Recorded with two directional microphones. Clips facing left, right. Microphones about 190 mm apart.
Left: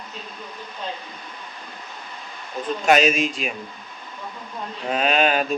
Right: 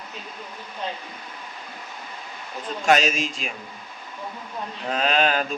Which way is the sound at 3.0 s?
55° left (ahead or behind).